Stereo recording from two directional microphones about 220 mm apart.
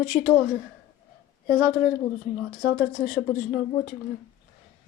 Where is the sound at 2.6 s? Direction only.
45° left (ahead or behind).